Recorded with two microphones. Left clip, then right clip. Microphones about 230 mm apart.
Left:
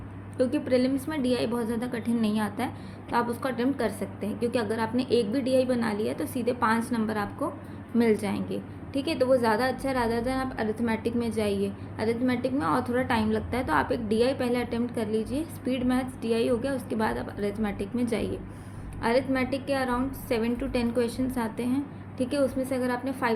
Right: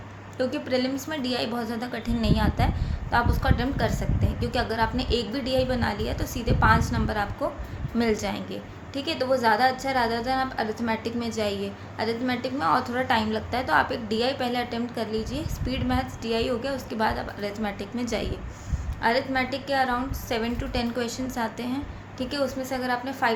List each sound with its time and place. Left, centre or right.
0.3 s a woman's voice: centre